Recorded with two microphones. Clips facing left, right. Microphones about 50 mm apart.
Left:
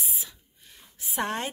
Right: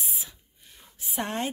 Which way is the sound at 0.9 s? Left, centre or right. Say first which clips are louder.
Left 1 dB; centre.